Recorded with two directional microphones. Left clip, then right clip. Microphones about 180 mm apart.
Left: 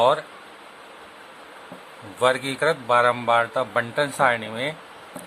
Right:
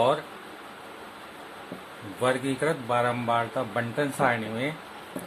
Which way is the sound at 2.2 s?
25° left (ahead or behind).